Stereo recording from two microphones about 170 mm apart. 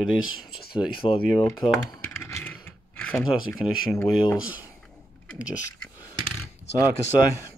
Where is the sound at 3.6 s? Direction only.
30° left (ahead or behind).